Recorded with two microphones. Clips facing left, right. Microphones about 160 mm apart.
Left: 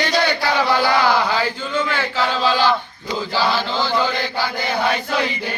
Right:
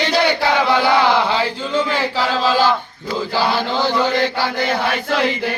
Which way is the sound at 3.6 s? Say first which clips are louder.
Right 3 dB; 20° right (ahead or behind).